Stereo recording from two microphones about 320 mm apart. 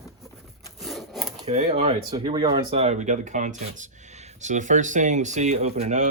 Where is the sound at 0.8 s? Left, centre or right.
Centre.